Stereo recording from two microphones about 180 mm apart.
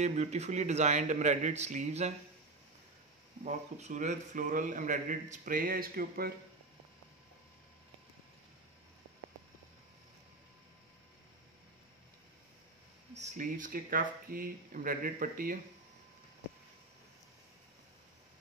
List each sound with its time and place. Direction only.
0.0 s a man's voice: 40° right (ahead or behind)
3.4 s a man's voice: 40° right (ahead or behind)
13.1 s a man's voice: 40° right (ahead or behind)